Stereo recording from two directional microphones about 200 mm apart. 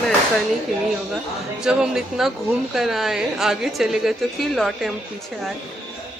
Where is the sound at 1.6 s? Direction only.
5° right (ahead or behind).